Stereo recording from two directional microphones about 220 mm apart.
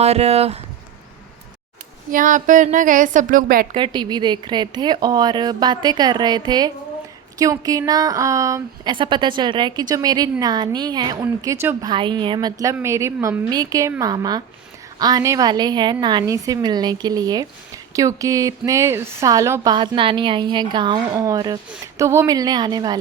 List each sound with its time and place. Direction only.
0.0 s a woman's voice: 30° right (ahead or behind)
2.1 s a woman's voice: 35° right (ahead or behind)
3.8 s a woman's voice: 20° right (ahead or behind)